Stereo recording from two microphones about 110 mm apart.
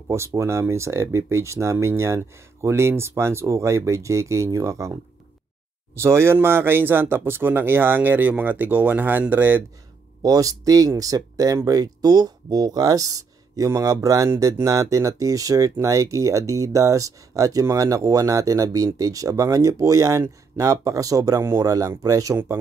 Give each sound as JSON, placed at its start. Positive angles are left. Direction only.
{"t": 0.1, "sound": "speech", "side_deg": -25}
{"t": 5.9, "sound": "speech", "side_deg": -25}
{"t": 10.2, "sound": "speech", "side_deg": -30}